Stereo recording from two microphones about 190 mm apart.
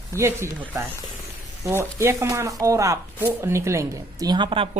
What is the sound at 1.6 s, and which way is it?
Speech, 15° right (ahead or behind).